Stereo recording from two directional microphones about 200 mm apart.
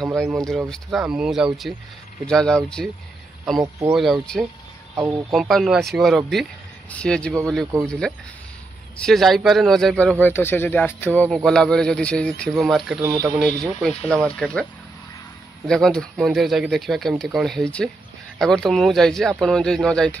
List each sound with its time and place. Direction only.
0.0 s speech: centre (ahead or behind)
3.5 s speech: 15° right (ahead or behind)
3.9 s speech: centre (ahead or behind)
4.9 s speech: 15° right (ahead or behind)
5.3 s speech: centre (ahead or behind)
13.0 s speech: 15° right (ahead or behind)
13.6 s speech: centre (ahead or behind)